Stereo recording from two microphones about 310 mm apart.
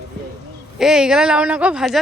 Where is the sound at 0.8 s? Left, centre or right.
Centre.